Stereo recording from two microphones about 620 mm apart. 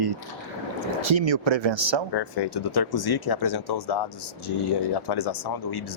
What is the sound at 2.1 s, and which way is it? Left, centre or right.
Speech, left.